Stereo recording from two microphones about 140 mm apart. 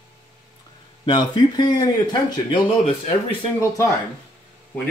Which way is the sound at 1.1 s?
35° left (ahead or behind).